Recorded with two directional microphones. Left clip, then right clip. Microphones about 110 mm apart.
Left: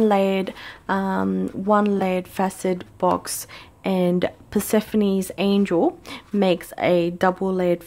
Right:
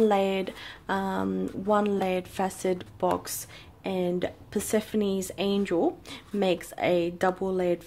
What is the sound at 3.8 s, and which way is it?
Speech, 50° left (ahead or behind).